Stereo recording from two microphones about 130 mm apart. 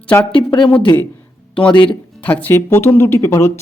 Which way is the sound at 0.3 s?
40° left (ahead or behind).